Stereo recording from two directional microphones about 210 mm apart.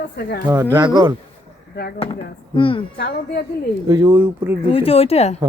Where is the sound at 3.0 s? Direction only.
50° left (ahead or behind).